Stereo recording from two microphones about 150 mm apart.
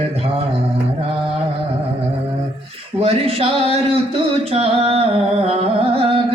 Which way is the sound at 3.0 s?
40° right (ahead or behind).